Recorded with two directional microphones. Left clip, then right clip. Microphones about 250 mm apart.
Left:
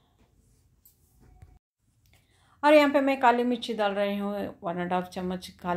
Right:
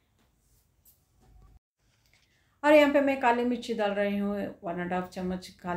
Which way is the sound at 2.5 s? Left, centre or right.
Left.